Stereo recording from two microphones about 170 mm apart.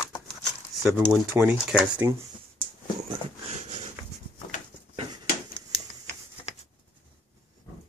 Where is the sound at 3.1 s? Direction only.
40° right (ahead or behind).